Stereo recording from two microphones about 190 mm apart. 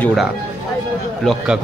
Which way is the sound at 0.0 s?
Centre (ahead or behind).